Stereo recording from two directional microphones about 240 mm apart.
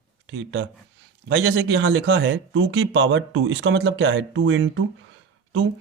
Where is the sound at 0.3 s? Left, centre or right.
Right.